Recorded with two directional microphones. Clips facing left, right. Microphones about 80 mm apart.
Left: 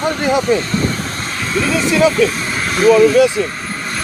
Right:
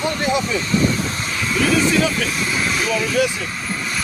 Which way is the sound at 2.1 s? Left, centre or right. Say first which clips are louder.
Left 6 dB; left.